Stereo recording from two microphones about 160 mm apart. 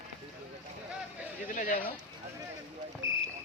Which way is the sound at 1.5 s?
55° left (ahead or behind).